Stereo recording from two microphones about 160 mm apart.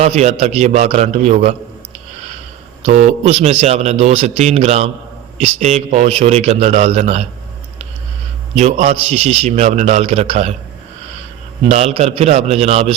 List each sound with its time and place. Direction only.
0.0 s a man's voice: 45° right (ahead or behind)
2.8 s a man's voice: 45° right (ahead or behind)
8.5 s a man's voice: 40° right (ahead or behind)
11.7 s a man's voice: 40° right (ahead or behind)